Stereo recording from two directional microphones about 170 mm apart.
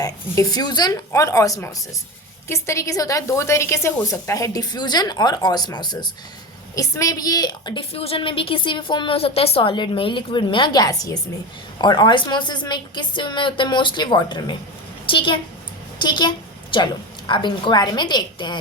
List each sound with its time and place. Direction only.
0.0 s a woman's voice: 20° left (ahead or behind)